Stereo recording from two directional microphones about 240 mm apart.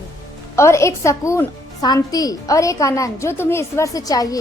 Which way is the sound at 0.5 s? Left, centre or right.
Centre.